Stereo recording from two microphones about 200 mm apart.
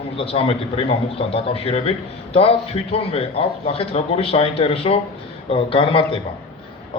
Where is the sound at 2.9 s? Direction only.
30° left (ahead or behind).